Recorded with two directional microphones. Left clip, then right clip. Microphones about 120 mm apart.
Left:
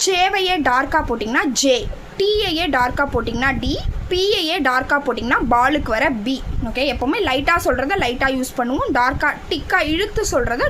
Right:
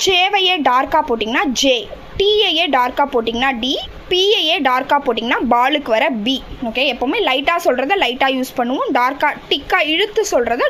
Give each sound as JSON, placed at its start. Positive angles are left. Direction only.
{"t": 0.0, "sound": "a woman's voice", "side_deg": -25}
{"t": 8.9, "sound": "a woman's voice", "side_deg": -35}